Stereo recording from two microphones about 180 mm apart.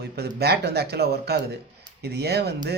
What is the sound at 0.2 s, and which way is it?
Speech, 65° right (ahead or behind).